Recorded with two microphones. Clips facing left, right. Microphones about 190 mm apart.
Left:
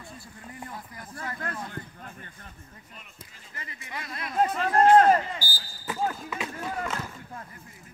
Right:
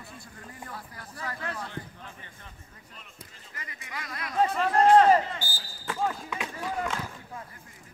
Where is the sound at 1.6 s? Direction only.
45° left (ahead or behind).